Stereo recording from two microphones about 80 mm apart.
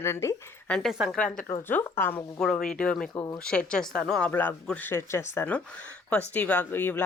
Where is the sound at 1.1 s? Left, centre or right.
Centre.